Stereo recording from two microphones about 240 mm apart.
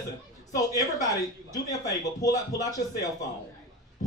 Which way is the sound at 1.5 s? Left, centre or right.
Centre.